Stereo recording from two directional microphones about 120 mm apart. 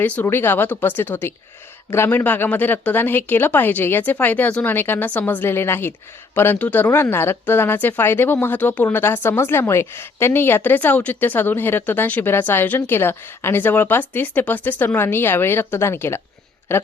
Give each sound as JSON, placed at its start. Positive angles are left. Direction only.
{"t": 0.0, "sound": "speech", "side_deg": 20}